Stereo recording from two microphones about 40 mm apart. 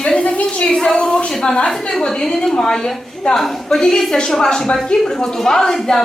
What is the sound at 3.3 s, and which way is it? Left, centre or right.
A woman's voice, centre.